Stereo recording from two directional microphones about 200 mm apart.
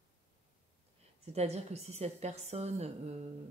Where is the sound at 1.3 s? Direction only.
30° right (ahead or behind).